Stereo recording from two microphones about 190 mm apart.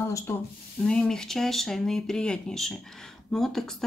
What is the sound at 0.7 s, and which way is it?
Speech, 5° left (ahead or behind).